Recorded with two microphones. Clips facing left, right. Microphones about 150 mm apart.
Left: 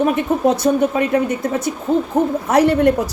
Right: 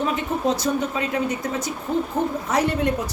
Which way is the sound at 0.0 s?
60° left (ahead or behind).